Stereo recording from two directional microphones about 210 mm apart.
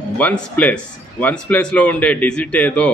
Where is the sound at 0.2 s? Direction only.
5° left (ahead or behind).